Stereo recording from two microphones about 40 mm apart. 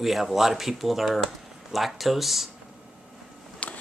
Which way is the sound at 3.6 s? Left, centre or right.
Left.